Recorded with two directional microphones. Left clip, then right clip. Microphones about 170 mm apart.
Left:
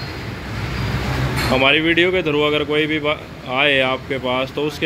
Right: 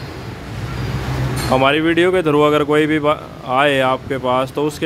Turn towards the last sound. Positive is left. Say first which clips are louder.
# right 3 dB
turn(degrees=-15)  # may be behind; listen again after turning